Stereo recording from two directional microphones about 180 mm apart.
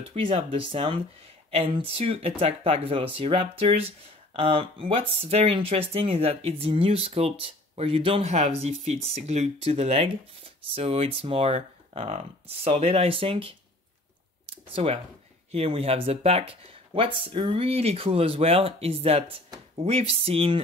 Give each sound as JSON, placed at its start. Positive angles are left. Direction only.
{"t": 0.1, "sound": "speech", "side_deg": -30}
{"t": 14.7, "sound": "speech", "side_deg": -35}